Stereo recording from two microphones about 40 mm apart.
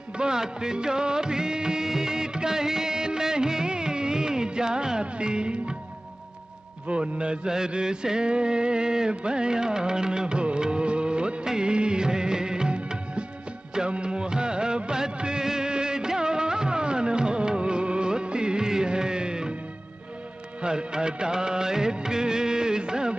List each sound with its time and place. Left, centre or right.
0.2 s music of bollywood: centre
6.9 s a man's voice: right
7.5 s music: centre
20.6 s music of bollywood: right